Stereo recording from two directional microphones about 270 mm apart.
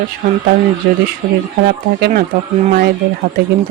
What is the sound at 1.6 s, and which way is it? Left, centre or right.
Speech, right.